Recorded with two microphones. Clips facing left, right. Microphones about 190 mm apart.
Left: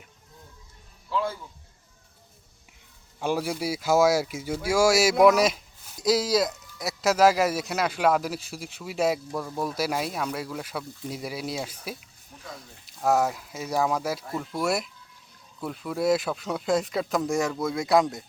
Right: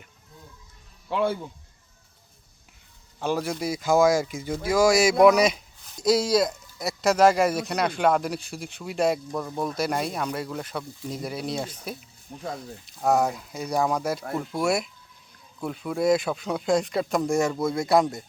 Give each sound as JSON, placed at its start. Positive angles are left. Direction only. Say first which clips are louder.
{"t": 1.1, "sound": "speech", "louder": "right 4 dB", "side_deg": -60}
{"t": 3.2, "sound": "speech", "louder": "even", "side_deg": 10}
{"t": 12.8, "sound": "speech", "louder": "right 1 dB", "side_deg": 0}